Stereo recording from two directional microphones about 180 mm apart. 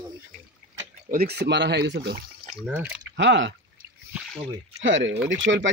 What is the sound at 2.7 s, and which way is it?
Speech, 5° right (ahead or behind).